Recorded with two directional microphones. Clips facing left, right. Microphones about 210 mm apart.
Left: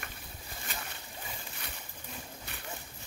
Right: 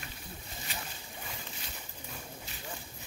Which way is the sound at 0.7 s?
50° left (ahead or behind).